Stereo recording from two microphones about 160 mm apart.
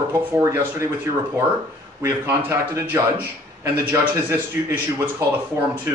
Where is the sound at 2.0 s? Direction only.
20° right (ahead or behind).